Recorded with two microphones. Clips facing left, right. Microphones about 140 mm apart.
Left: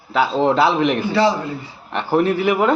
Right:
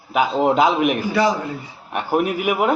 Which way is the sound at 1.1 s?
25° left (ahead or behind).